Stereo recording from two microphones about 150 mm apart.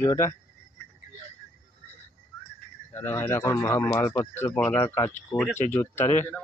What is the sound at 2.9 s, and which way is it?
A man's voice, 15° left (ahead or behind).